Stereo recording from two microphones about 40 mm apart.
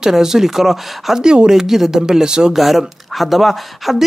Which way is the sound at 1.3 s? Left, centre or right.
Right.